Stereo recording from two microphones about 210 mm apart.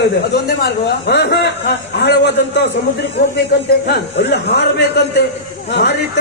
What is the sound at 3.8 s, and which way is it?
A man's voice, 55° left (ahead or behind).